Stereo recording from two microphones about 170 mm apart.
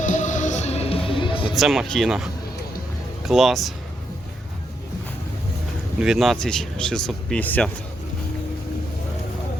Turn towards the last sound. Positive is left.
turn(degrees=10)  # may be behind; listen again after turning